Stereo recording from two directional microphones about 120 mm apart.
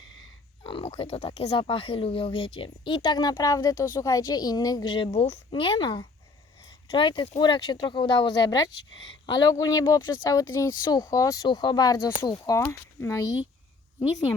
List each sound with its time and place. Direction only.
0.6 s speech: 50° left (ahead or behind)
2.6 s a woman's voice: 35° left (ahead or behind)